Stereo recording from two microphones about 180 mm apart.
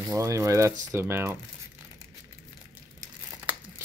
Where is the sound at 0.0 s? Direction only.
20° right (ahead or behind).